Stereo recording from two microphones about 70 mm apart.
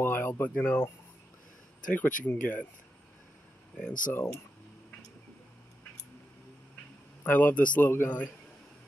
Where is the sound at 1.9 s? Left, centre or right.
Left.